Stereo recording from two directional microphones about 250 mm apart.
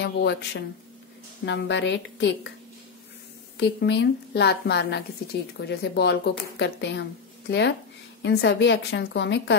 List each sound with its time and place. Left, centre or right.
0.0 s a woman's voice: left
3.5 s a woman's voice: left